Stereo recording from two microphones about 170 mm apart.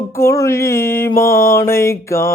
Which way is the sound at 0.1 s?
15° left (ahead or behind).